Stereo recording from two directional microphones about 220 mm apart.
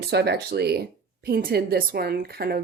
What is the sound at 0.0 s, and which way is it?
A woman's voice, 50° right (ahead or behind).